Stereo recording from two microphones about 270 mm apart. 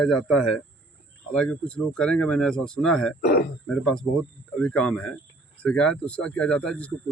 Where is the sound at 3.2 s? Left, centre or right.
Left.